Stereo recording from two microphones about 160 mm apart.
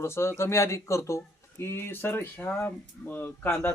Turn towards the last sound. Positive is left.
turn(degrees=15)  # may be behind; listen again after turning